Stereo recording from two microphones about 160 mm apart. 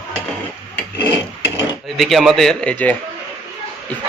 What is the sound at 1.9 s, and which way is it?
Speech, centre (ahead or behind).